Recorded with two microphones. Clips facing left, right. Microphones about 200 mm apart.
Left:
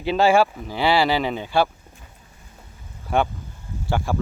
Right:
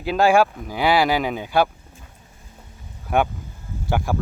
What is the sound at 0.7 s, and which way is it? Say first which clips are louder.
Speech: right 1 dB; 15° right (ahead or behind).